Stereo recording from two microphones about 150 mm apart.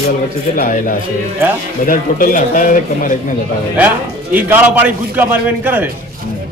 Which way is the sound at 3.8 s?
10° right (ahead or behind).